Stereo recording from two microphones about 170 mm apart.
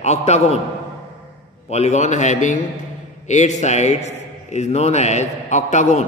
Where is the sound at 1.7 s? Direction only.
40° left (ahead or behind).